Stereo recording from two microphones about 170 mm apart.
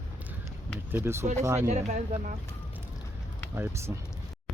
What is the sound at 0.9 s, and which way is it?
Speech, 15° right (ahead or behind).